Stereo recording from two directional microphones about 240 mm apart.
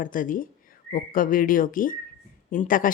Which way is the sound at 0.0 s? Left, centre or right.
Left.